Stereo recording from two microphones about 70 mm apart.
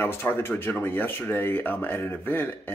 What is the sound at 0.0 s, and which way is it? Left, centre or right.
A man's voice, left.